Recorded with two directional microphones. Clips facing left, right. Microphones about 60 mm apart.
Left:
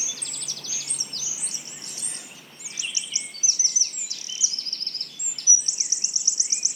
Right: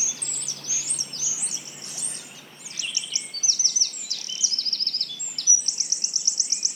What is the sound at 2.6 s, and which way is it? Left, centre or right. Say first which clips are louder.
Bird vocalization: even; centre.